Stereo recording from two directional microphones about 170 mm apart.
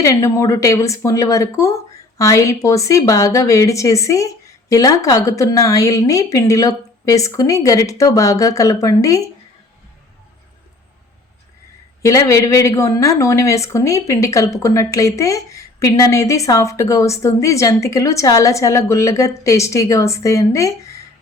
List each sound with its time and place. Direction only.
0.0 s speech: 20° left (ahead or behind)
12.0 s speech: 20° left (ahead or behind)